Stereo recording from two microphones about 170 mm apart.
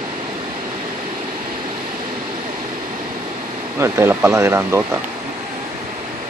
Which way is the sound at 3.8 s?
15° right (ahead or behind).